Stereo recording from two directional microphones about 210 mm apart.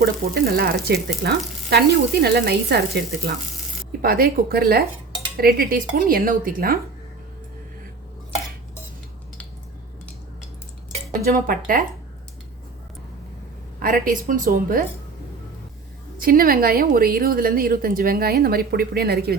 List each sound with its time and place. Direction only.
0.0 s a woman's voice: 45° right (ahead or behind)
11.1 s speech: 40° right (ahead or behind)
13.7 s a woman's voice: 45° right (ahead or behind)
16.1 s a woman's voice: 45° right (ahead or behind)